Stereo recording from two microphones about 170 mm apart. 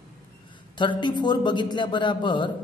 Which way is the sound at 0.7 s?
25° left (ahead or behind).